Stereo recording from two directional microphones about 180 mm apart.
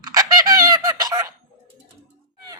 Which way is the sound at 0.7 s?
20° right (ahead or behind).